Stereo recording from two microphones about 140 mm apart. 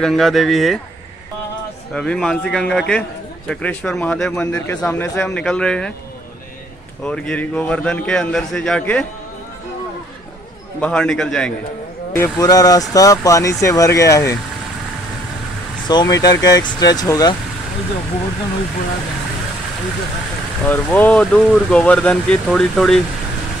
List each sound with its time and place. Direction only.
0.0 s a man's voice: centre (ahead or behind)
2.0 s a man's voice: 5° left (ahead or behind)
7.1 s a man's voice: 5° left (ahead or behind)
10.8 s a man's voice: 5° left (ahead or behind)
12.2 s speech: 25° left (ahead or behind)
15.9 s speech: 30° left (ahead or behind)
20.6 s speech: 10° left (ahead or behind)